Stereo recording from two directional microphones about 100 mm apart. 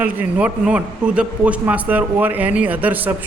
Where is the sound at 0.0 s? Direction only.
15° right (ahead or behind).